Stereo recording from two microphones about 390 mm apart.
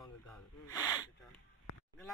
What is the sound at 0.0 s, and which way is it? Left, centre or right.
Snort, centre.